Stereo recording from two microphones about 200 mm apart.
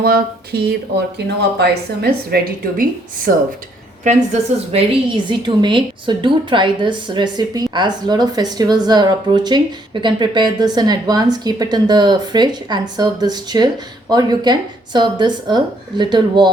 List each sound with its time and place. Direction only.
0.0 s a woman's voice: 50° right (ahead or behind)
4.3 s a woman's voice: 35° right (ahead or behind)